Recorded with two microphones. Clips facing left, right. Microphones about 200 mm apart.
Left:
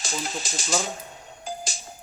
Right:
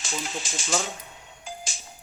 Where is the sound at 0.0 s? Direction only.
40° left (ahead or behind).